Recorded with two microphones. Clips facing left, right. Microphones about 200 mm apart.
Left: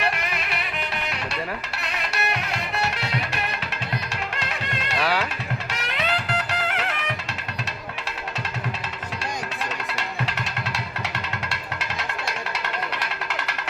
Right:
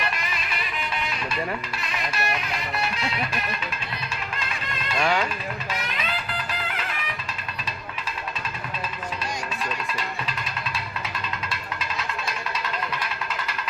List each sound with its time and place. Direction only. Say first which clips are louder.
0.0 s music: left 3 dB; 65° left (ahead or behind)
4.4 s music: left 3 dB; 70° left (ahead or behind)
4.9 s speech: right 1 dB; 5° left (ahead or behind)
5.7 s music: left 6 dB; 75° left (ahead or behind)
9.9 s music: left 2 dB; 75° left (ahead or behind)